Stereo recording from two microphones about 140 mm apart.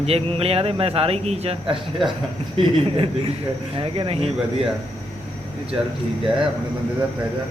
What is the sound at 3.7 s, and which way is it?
Speech, 40° right (ahead or behind).